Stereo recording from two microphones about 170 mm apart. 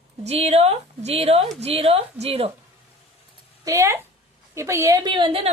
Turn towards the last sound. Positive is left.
turn(degrees=-30)  # may be behind; listen again after turning